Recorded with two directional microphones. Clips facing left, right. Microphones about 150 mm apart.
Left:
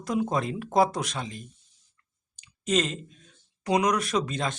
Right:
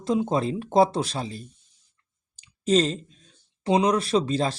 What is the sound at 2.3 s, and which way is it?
Clicking, 30° right (ahead or behind).